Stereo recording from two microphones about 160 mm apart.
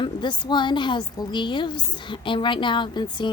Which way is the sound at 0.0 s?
30° left (ahead or behind).